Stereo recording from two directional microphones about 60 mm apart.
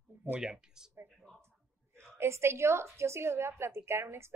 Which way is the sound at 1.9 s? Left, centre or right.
Right.